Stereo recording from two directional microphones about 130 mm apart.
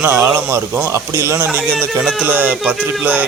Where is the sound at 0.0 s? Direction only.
15° right (ahead or behind).